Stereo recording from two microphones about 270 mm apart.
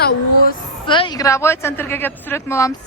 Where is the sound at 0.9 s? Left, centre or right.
Centre.